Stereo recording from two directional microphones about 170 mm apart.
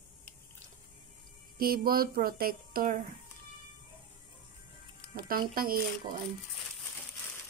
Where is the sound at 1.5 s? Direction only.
60° right (ahead or behind).